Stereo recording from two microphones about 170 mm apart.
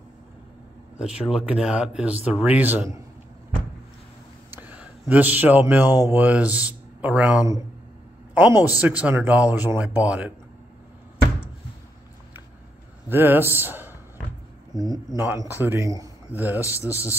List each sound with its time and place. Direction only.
0.9 s a man's voice: 5° right (ahead or behind)
4.5 s speech: 10° right (ahead or behind)
13.1 s a man's voice: 10° right (ahead or behind)
16.6 s a man's voice: 15° left (ahead or behind)